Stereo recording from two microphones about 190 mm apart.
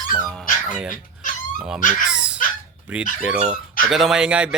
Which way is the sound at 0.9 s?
45° left (ahead or behind).